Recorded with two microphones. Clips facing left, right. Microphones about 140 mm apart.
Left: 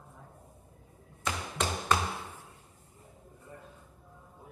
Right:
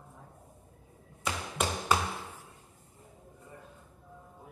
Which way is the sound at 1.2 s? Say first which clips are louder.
Even; 5° right (ahead or behind).